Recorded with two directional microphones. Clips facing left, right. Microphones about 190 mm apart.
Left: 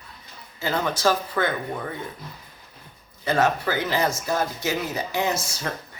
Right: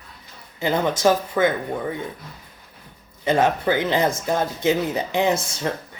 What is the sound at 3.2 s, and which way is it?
Speech, 20° right (ahead or behind).